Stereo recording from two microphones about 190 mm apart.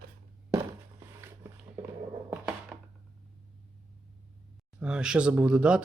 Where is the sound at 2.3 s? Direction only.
5° right (ahead or behind).